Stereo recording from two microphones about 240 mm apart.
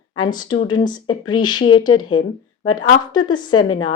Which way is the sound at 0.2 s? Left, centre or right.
Centre.